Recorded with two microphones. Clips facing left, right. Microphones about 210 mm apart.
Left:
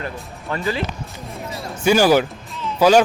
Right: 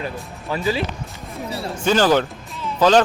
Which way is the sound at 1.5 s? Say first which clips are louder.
Right 5 dB; 30° right (ahead or behind).